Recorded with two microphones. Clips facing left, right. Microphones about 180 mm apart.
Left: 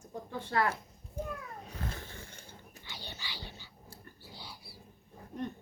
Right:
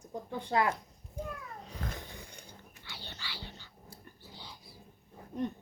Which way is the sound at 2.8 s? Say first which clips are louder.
Left 1 dB; 15° left (ahead or behind).